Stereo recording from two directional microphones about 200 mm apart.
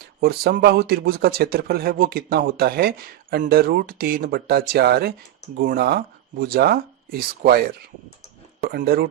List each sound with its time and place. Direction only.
0.0 s speech: 50° right (ahead or behind)
8.6 s speech: 50° right (ahead or behind)